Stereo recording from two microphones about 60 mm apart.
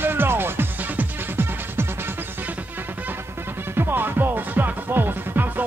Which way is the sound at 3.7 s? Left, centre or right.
Right.